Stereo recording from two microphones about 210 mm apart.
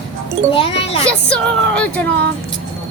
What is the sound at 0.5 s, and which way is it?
Speech, 25° left (ahead or behind).